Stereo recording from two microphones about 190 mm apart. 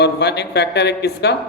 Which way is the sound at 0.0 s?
65° left (ahead or behind).